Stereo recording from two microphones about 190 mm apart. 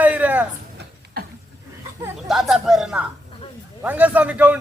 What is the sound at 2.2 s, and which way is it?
A man's voice, centre (ahead or behind).